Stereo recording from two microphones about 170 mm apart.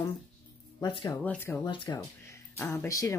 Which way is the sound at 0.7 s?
20° left (ahead or behind).